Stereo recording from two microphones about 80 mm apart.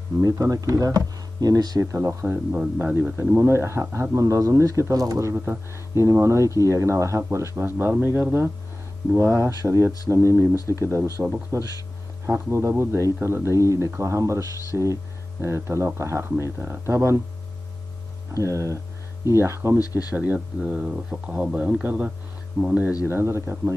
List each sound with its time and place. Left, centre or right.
0.2 s speech: right
1.8 s a man's voice: right
5.3 s a man's voice: right
5.9 s speech: right
18.4 s speech: right
19.8 s speech: left
20.1 s a man's voice: centre
23.0 s speech: right